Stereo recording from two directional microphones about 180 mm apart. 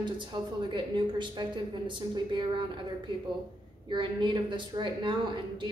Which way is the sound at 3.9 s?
25° right (ahead or behind).